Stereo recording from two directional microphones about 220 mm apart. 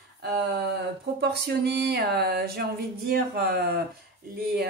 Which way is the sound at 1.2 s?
45° right (ahead or behind).